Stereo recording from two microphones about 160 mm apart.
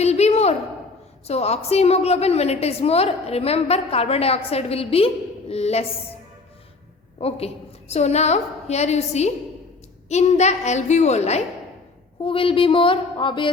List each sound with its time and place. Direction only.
0.0 s a sound: 40° left (ahead or behind)
1.3 s a woman's voice: 40° left (ahead or behind)
7.2 s a woman's voice: 40° left (ahead or behind)
12.2 s a woman's voice: 35° left (ahead or behind)